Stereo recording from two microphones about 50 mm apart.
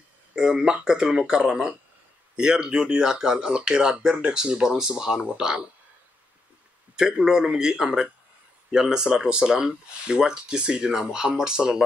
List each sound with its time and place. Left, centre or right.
0.4 s speech: centre
7.0 s speech: centre